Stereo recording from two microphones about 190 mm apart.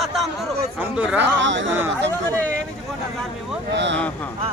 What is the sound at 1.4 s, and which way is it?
Speech, 75° right (ahead or behind).